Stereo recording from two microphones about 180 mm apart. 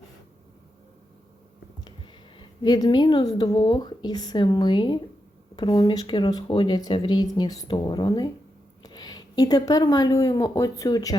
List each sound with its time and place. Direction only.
1.8 s a woman's voice: 25° left (ahead or behind)